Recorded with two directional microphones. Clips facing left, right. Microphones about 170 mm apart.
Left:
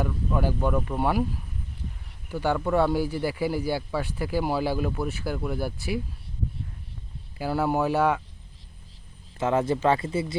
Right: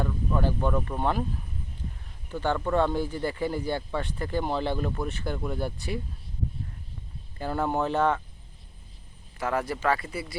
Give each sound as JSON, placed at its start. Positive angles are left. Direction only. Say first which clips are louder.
{"t": 0.0, "sound": "speech", "louder": "left 1 dB", "side_deg": 10}
{"t": 2.3, "sound": "speech", "louder": "left 2 dB", "side_deg": 10}
{"t": 7.3, "sound": "speech", "louder": "left 3 dB", "side_deg": 5}
{"t": 9.4, "sound": "speech", "louder": "left 5 dB", "side_deg": 25}